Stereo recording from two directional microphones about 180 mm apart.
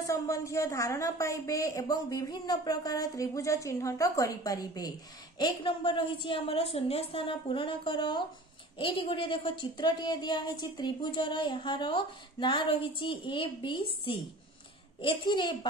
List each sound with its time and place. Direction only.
0.0 s a woman's voice: 20° left (ahead or behind)